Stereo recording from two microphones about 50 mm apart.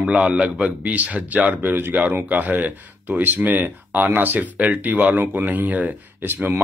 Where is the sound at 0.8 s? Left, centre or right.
Right.